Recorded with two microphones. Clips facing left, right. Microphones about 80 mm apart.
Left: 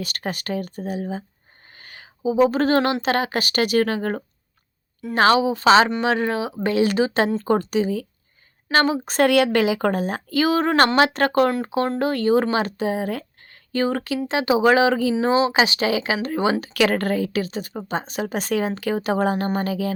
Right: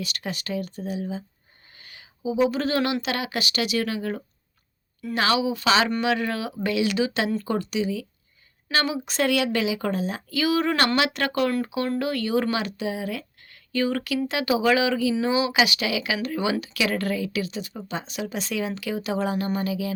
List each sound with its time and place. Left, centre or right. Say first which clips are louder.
0.0 s speech: left 3 dB; left
9.2 s speech: left 6 dB; left